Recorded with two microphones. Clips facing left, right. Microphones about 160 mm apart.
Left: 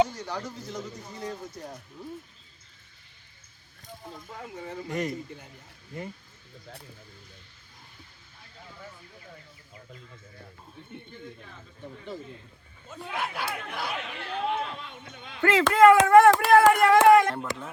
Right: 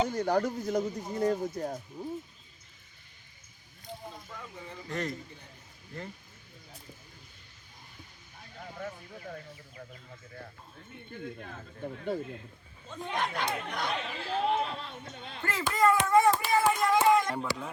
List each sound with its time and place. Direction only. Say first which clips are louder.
0.1 s speech: right 8 dB; 50° right (ahead or behind)
2.0 s speech: right 2 dB; 15° right (ahead or behind)
4.4 s speech: left 6 dB; 60° left (ahead or behind)
4.9 s speech: left 3 dB; 10° left (ahead or behind)
8.5 s speech: right 6 dB; 50° right (ahead or behind)
11.1 s speech: right 3 dB; 50° right (ahead or behind)
12.9 s speech: right 1 dB; 5° left (ahead or behind)
14.3 s speech: right 1 dB; 35° right (ahead or behind)
15.4 s speech: left 10 dB; 90° left; by 17.2 s 65° left (ahead or behind)